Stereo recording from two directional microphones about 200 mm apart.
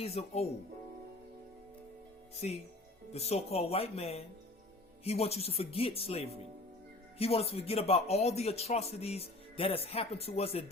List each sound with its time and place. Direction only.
0.0 s speech: 30° left (ahead or behind)
2.4 s speech: 40° left (ahead or behind)